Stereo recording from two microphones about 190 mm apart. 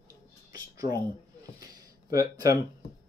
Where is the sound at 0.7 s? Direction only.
15° right (ahead or behind).